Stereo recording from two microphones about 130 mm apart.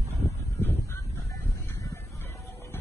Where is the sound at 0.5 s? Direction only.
15° left (ahead or behind).